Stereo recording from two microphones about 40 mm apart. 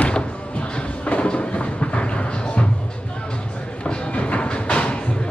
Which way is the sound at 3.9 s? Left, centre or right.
Left.